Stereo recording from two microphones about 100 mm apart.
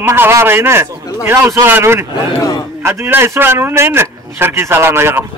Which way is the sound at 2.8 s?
25° right (ahead or behind).